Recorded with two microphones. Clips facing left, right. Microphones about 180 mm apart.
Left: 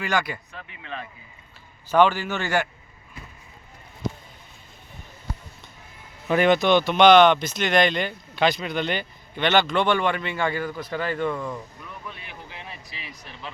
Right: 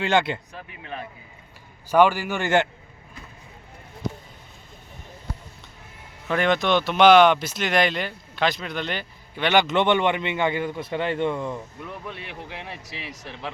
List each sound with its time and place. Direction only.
0.0 s speech: 25° right (ahead or behind)
1.9 s speech: 10° right (ahead or behind)
6.2 s speech: 5° left (ahead or behind); by 11.6 s 25° right (ahead or behind)
11.8 s speech: 70° right (ahead or behind)